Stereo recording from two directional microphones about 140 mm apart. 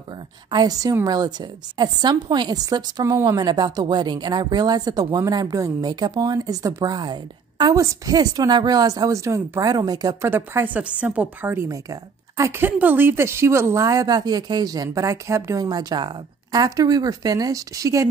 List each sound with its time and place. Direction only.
0.5 s a woman's voice: 30° right (ahead or behind)